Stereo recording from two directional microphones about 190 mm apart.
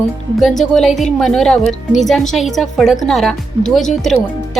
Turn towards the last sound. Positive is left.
turn(degrees=0)  # may be behind; listen again after turning